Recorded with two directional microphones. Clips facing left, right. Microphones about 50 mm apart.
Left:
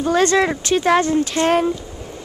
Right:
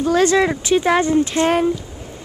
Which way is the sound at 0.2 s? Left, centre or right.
Centre.